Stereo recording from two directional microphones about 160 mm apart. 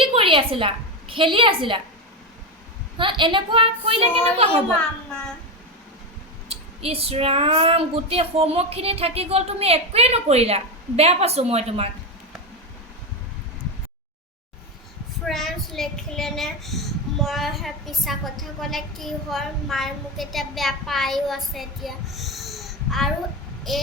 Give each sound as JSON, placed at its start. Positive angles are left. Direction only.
{"t": 0.0, "sound": "a woman's voice", "side_deg": -35}
{"t": 3.0, "sound": "speech", "side_deg": -30}
{"t": 6.5, "sound": "speech", "side_deg": -40}
{"t": 15.3, "sound": "speech", "side_deg": 0}